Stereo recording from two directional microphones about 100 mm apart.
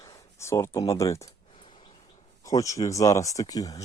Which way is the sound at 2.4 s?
35° left (ahead or behind).